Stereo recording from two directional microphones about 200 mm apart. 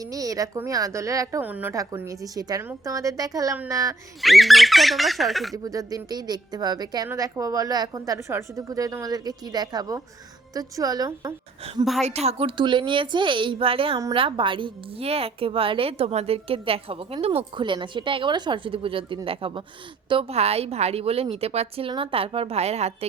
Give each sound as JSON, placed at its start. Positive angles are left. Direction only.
{"t": 0.0, "sound": "a woman's voice", "side_deg": -15}
{"t": 4.2, "sound": "speech", "side_deg": 0}
{"t": 5.6, "sound": "a woman's voice", "side_deg": -20}
{"t": 11.6, "sound": "a woman's voice", "side_deg": -30}